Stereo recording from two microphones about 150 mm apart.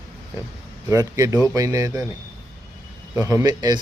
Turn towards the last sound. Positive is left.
turn(degrees=-25)  # may be behind; listen again after turning